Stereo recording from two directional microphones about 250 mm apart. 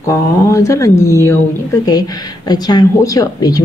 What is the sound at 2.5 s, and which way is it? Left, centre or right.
Speech, centre.